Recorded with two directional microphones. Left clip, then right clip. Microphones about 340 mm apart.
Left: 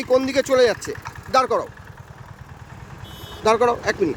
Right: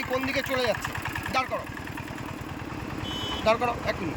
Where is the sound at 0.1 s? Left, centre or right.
Centre.